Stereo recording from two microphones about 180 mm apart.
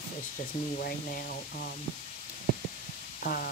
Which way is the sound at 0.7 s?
55° left (ahead or behind).